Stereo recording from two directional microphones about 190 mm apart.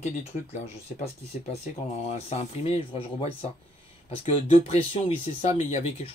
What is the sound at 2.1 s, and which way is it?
Speech, 35° left (ahead or behind).